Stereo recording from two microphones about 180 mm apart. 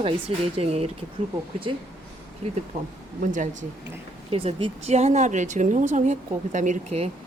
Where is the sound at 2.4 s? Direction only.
35° right (ahead or behind).